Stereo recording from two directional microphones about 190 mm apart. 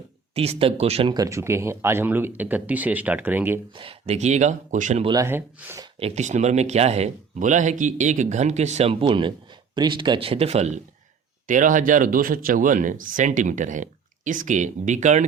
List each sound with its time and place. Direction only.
0.3 s speech: 30° right (ahead or behind)
1.1 s speech: 15° right (ahead or behind)
3.8 s speech: 30° right (ahead or behind)
5.0 s speech: 15° right (ahead or behind)
5.8 s speech: 30° right (ahead or behind)